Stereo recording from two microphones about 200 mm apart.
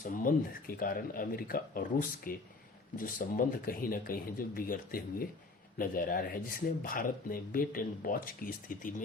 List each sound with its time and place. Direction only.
0.0 s speech: 45° left (ahead or behind)